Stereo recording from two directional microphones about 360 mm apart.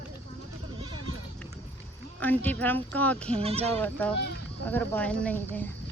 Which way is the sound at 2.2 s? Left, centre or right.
Centre.